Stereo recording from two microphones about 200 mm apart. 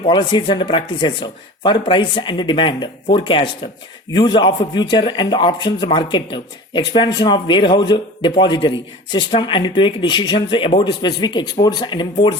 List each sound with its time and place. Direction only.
0.1 s a man's voice: 20° left (ahead or behind)